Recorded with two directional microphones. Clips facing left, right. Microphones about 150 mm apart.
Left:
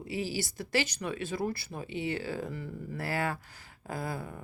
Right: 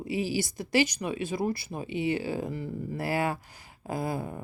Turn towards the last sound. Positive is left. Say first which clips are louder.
# right 5 dB
turn(degrees=-20)  # may be behind; listen again after turning